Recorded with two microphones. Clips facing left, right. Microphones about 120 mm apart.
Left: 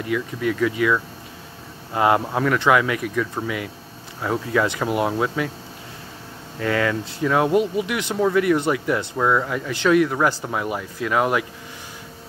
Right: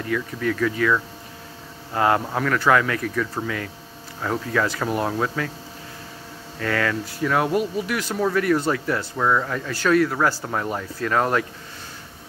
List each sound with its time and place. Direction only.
0.0 s speech: 15° left (ahead or behind)
2.0 s speech: 20° left (ahead or behind)
6.6 s speech: 20° left (ahead or behind)